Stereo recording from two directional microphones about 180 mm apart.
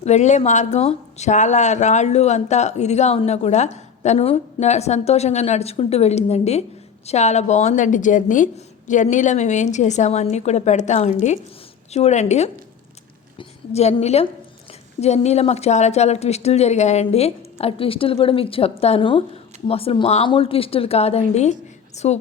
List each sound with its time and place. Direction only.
0.0 s a woman's voice: 40° left (ahead or behind)